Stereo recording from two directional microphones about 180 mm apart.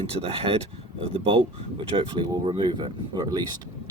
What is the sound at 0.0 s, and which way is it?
Speech, 30° right (ahead or behind).